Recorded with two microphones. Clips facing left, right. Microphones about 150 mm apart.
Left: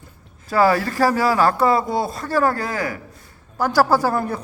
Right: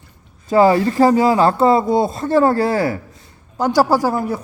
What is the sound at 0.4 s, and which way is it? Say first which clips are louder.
Speech: right 5 dB; 20° right (ahead or behind).